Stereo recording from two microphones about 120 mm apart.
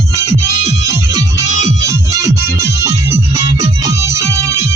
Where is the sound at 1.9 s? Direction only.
30° right (ahead or behind).